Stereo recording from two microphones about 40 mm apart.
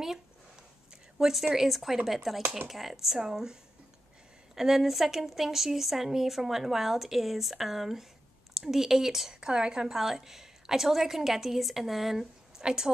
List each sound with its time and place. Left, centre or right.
1.4 s a woman's voice: centre
4.6 s a woman's voice: centre
9.3 s a woman's voice: centre
9.8 s a woman's voice: centre